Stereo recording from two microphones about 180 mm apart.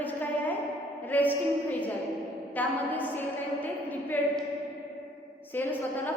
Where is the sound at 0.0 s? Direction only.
10° left (ahead or behind).